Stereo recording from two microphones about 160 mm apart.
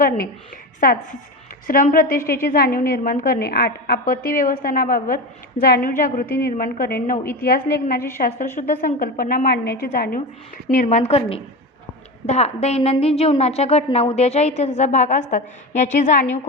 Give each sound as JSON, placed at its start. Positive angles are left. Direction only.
{"t": 0.8, "sound": "a woman's voice", "side_deg": 60}
{"t": 10.8, "sound": "a woman's voice", "side_deg": 45}